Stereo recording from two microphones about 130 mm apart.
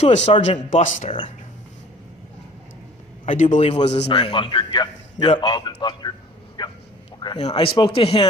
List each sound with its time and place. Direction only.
0.0 s a man's voice: 60° left (ahead or behind)
3.2 s a man's voice: 65° left (ahead or behind); by 6.1 s 35° left (ahead or behind)
6.6 s bow-wow: 35° left (ahead or behind)
7.5 s a man's voice: 40° left (ahead or behind)